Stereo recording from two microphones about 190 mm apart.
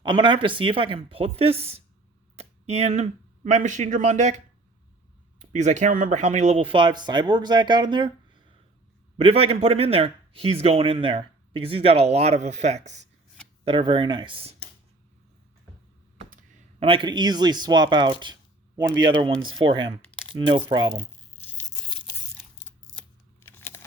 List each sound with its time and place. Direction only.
0.0 s speech: 25° right (ahead or behind)
5.4 s speech: 40° right (ahead or behind)
9.1 s a man's voice: 30° right (ahead or behind)
13.7 s speech: 25° right (ahead or behind)
16.8 s speech: 25° right (ahead or behind)
19.6 s speech: 25° right (ahead or behind)
20.1 s coin: 25° right (ahead or behind)
20.7 s speech: 25° right (ahead or behind)
21.3 s tearing: 10° left (ahead or behind)
23.4 s a sound: 15° left (ahead or behind)